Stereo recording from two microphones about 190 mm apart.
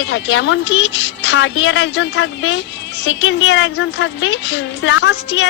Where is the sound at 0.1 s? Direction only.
80° left.